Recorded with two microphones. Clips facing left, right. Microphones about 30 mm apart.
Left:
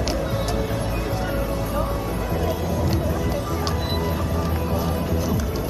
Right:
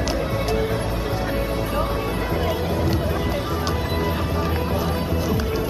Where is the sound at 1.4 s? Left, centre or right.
Right.